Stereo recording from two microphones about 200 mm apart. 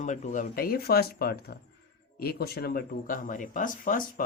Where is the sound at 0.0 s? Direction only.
40° left (ahead or behind).